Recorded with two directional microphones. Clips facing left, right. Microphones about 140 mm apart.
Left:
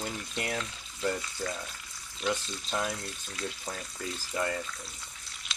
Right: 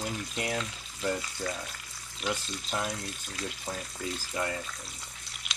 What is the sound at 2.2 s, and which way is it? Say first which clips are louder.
Speech: left 2 dB; 15° right (ahead or behind).